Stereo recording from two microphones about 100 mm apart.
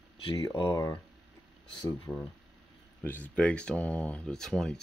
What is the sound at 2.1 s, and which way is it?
Speech, 30° left (ahead or behind).